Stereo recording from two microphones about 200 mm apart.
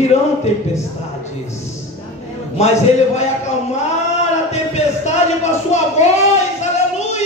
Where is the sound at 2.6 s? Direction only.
35° left (ahead or behind).